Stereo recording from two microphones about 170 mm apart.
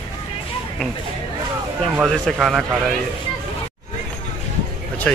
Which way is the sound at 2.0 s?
Centre (ahead or behind).